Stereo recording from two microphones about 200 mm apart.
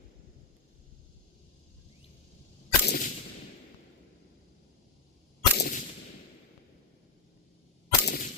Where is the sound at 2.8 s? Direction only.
45° left (ahead or behind).